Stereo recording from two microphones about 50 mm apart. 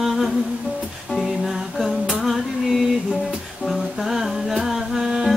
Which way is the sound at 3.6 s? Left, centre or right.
Centre.